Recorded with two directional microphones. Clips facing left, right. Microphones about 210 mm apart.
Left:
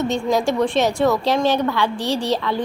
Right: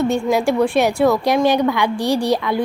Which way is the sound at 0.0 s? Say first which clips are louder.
Right 2 dB; 10° right (ahead or behind).